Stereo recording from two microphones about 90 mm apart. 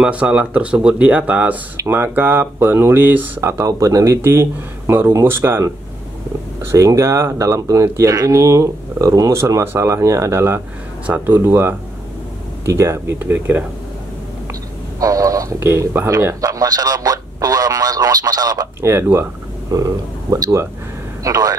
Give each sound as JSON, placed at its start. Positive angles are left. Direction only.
{"t": 0.0, "sound": "speech", "side_deg": -10}
{"t": 1.8, "sound": "speech", "side_deg": -25}
{"t": 6.7, "sound": "speech", "side_deg": -35}
{"t": 14.5, "sound": "a sound", "side_deg": -40}
{"t": 15.6, "sound": "speech", "side_deg": -25}
{"t": 18.8, "sound": "speech", "side_deg": -25}
{"t": 19.7, "sound": "a man's voice", "side_deg": -40}